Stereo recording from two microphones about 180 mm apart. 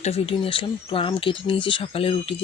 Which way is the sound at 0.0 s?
35° left (ahead or behind).